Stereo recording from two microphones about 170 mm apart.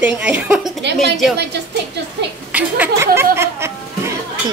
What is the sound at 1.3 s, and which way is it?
Speech, 80° right.